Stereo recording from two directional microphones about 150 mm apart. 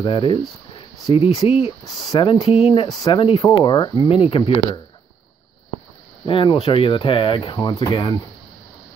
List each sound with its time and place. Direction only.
0.0 s speech: 35° left (ahead or behind)
6.2 s speech: 35° left (ahead or behind)